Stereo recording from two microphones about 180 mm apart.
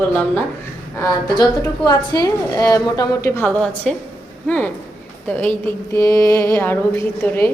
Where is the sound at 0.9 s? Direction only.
20° left (ahead or behind).